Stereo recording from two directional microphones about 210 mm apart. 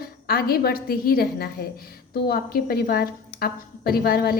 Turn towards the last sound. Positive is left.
turn(degrees=45)  # may be behind; listen again after turning